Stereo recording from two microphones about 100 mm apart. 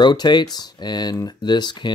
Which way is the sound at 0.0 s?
45° left (ahead or behind).